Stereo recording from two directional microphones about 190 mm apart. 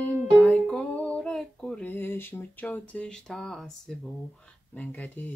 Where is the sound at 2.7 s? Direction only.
5° left (ahead or behind).